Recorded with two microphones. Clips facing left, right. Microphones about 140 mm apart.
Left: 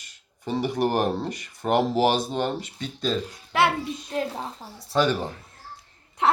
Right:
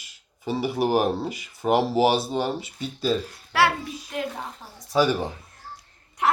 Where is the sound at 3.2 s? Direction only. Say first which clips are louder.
Even; 20° left (ahead or behind).